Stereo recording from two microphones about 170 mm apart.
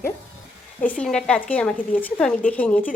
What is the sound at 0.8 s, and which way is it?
A woman's voice, 5° left (ahead or behind).